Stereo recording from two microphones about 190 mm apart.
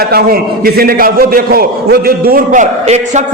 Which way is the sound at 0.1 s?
55° right (ahead or behind).